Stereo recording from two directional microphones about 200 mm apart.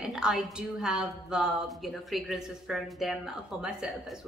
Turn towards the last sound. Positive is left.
turn(degrees=-5)  # may be behind; listen again after turning